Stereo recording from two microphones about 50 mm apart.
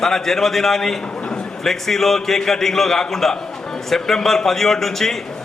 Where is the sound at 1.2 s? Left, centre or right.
Centre.